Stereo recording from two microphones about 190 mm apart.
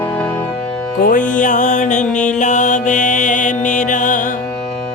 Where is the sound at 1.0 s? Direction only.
45° left (ahead or behind).